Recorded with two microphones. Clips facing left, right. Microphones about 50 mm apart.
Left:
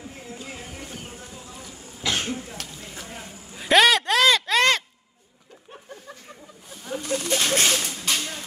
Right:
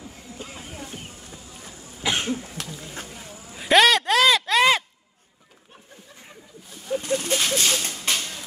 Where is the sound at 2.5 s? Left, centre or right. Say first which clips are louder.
Right 2 dB; right.